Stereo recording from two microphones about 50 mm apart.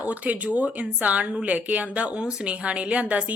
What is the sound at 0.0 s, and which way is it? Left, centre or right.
Speech, right.